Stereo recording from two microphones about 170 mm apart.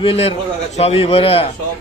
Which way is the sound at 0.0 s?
35° left (ahead or behind).